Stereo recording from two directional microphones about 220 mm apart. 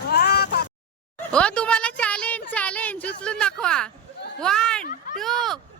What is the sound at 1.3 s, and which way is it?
A woman's voice, 5° left (ahead or behind).